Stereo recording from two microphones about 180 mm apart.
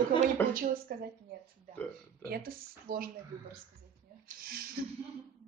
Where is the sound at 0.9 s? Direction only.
55° right (ahead or behind).